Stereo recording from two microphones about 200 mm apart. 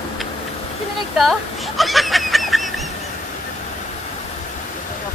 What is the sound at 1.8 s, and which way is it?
Goose, centre (ahead or behind).